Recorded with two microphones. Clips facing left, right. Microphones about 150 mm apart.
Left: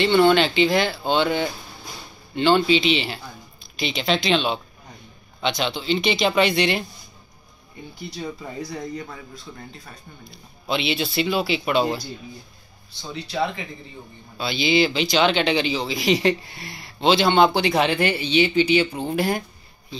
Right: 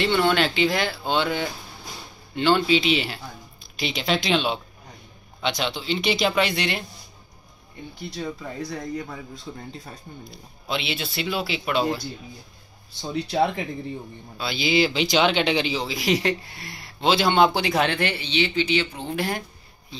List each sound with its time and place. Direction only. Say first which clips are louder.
0.0 s speech: left 4 dB; centre (ahead or behind)
8.2 s speech: even; 10° left (ahead or behind)
8.9 s speech: right 2 dB; centre (ahead or behind)
9.5 s speech: right 4 dB; 15° right (ahead or behind)
10.7 s speech: left 5 dB; centre (ahead or behind)
13.1 s speech: right 3 dB; 50° right (ahead or behind)
14.4 s speech: left 2 dB; 5° right (ahead or behind)